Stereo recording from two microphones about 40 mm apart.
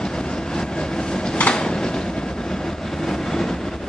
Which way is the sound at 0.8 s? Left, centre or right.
Centre.